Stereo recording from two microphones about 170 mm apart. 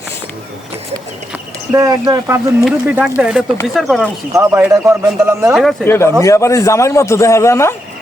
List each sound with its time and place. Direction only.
1.7 s speech: 20° right (ahead or behind)
2.6 s speech: 5° right (ahead or behind)
4.3 s a man's voice: 15° right (ahead or behind)
5.8 s a man's voice: 15° left (ahead or behind)